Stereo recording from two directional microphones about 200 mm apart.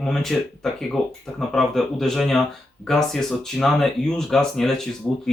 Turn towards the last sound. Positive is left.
turn(degrees=5)  # may be behind; listen again after turning